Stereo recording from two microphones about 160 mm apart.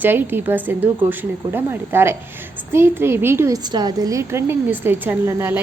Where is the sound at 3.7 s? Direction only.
25° right (ahead or behind).